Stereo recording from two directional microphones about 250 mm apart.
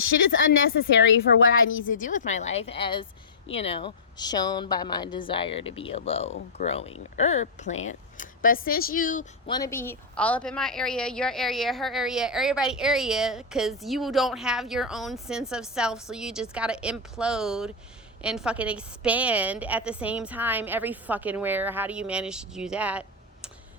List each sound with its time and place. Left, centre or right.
0.1 s a woman's voice: left
1.9 s a woman's voice: left
9.5 s speech: centre